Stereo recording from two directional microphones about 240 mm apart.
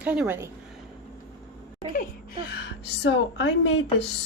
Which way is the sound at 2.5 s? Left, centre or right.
Left.